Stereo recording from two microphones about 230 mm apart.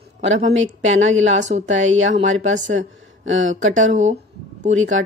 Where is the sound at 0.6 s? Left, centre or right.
Right.